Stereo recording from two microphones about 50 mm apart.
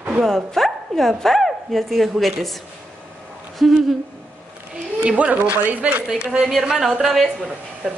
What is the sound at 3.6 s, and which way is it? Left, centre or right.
Speech, centre.